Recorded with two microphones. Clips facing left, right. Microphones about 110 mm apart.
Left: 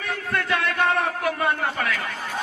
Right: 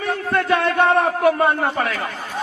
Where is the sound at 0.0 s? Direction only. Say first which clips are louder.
Right 6 dB; 30° right (ahead or behind).